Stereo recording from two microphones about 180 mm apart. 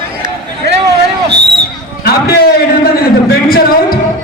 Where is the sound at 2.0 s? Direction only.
60° left (ahead or behind).